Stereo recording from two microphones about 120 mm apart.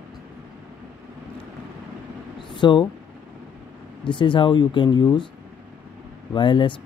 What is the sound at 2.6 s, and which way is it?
Speech, 40° left (ahead or behind).